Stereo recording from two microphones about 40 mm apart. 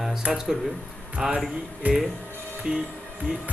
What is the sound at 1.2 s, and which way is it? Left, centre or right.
Speech, right.